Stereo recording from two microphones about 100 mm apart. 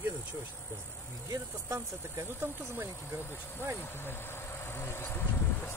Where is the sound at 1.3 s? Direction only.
30° right (ahead or behind).